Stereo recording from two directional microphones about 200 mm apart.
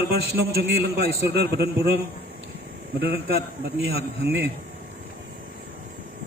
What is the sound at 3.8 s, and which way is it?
Speech, 60° right (ahead or behind).